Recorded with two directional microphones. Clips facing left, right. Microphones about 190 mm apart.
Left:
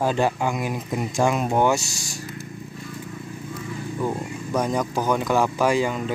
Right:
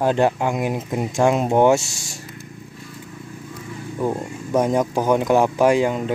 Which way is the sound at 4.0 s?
20° right (ahead or behind).